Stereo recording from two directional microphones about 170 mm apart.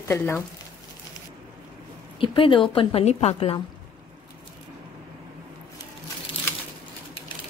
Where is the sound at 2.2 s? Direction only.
30° left (ahead or behind).